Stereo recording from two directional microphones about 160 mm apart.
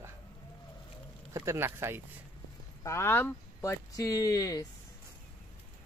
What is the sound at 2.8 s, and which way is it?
Speech, 15° left (ahead or behind).